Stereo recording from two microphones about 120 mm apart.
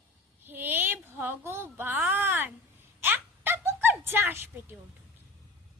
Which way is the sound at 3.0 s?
15° right (ahead or behind).